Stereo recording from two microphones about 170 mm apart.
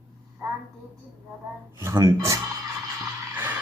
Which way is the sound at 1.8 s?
20° right (ahead or behind).